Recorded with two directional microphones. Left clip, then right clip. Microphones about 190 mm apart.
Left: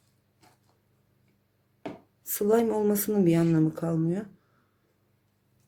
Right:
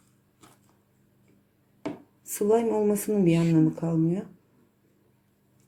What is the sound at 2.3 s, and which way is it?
Speech, 30° left (ahead or behind).